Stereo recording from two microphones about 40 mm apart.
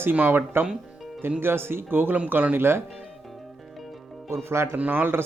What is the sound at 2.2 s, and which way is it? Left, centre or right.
Speech, right.